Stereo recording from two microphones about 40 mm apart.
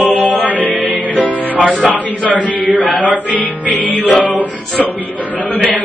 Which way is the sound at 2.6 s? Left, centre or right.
Right.